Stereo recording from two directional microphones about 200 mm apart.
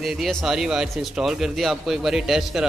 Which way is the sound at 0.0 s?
Centre (ahead or behind).